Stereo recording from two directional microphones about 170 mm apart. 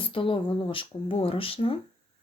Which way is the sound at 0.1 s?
30° left (ahead or behind).